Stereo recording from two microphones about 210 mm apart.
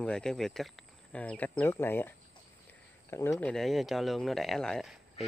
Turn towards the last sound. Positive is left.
turn(degrees=0)  # may be behind; listen again after turning